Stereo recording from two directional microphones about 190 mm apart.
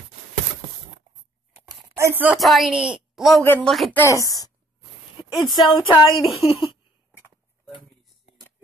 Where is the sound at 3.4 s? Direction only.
10° left (ahead or behind).